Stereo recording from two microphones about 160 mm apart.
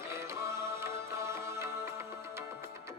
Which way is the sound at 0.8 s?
15° right (ahead or behind).